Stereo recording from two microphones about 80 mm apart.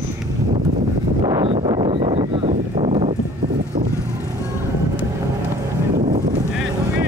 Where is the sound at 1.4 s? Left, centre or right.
Right.